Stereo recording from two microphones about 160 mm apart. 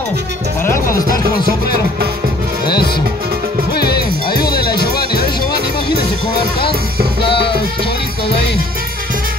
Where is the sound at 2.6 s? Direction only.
75° left (ahead or behind).